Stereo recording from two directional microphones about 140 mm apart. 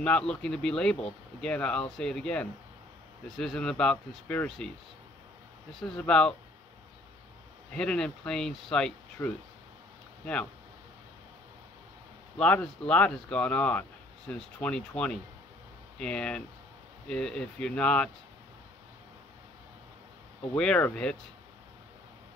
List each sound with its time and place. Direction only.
0.0 s speech: 5° left (ahead or behind)
5.8 s speech: 5° left (ahead or behind)
7.7 s speech: 5° left (ahead or behind)
12.4 s speech: 10° left (ahead or behind)
20.5 s speech: 10° left (ahead or behind)